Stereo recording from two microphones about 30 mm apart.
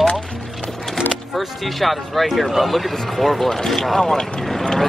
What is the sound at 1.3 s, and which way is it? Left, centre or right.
Speech, centre.